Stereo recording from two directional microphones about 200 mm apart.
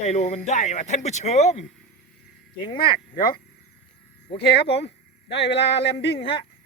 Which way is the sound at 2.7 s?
25° left (ahead or behind).